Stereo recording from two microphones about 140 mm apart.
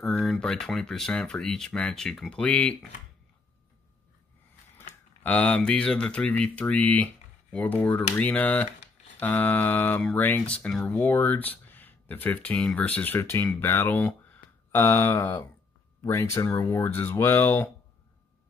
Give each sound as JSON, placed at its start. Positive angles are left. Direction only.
{"t": 0.4, "sound": "speech", "side_deg": 5}
{"t": 5.2, "sound": "speech", "side_deg": 10}